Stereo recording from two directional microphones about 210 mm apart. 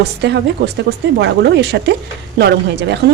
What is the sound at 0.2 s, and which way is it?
Speech, 55° right (ahead or behind).